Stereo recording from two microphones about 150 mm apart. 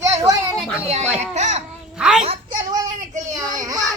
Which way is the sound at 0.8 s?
45° right (ahead or behind).